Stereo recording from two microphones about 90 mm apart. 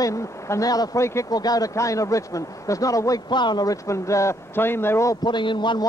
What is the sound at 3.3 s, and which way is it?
Speech, 55° left (ahead or behind).